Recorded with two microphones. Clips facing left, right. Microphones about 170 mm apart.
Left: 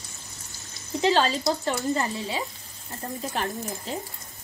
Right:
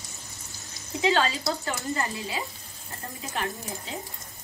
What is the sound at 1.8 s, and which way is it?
Speech, 20° left (ahead or behind).